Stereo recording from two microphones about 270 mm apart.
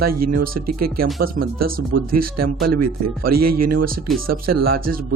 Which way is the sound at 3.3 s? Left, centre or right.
Right.